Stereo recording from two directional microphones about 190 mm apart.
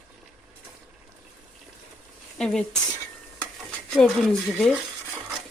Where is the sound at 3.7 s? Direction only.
Centre (ahead or behind).